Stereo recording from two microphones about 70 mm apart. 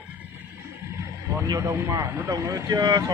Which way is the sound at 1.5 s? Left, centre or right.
Right.